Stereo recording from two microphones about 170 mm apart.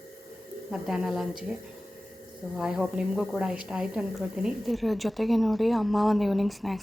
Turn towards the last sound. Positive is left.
turn(degrees=0)  # may be behind; listen again after turning